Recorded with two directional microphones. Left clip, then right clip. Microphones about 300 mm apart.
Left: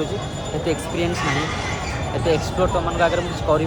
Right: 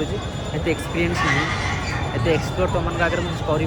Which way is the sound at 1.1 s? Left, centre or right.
Right.